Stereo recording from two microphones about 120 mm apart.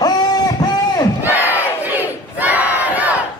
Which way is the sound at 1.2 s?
15° right (ahead or behind).